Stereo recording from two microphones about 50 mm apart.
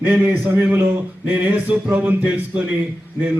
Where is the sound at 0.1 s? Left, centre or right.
Right.